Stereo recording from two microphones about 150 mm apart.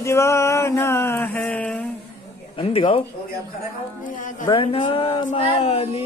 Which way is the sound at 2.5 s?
40° left (ahead or behind).